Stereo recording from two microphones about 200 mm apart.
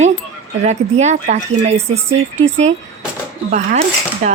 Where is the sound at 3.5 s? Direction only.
40° right (ahead or behind).